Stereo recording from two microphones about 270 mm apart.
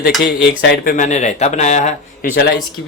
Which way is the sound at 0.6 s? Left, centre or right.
Left.